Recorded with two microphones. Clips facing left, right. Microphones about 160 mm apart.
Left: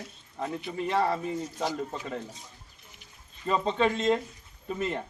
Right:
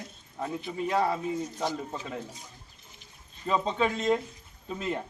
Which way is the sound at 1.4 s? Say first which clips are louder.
Left 1 dB; 10° left (ahead or behind).